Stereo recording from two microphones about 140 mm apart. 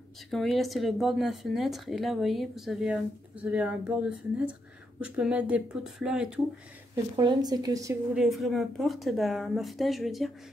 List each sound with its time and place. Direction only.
0.3 s speech: centre (ahead or behind)
5.0 s speech: 10° right (ahead or behind)
7.2 s a woman's voice: 30° right (ahead or behind)
8.1 s speech: centre (ahead or behind)